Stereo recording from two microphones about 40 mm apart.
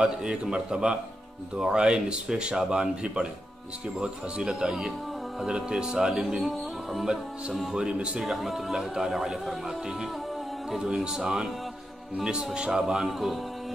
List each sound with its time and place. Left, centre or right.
0.0 s speech: right
4.5 s speech: centre
7.7 s speech: right
8.2 s speech: centre
8.7 s speech: centre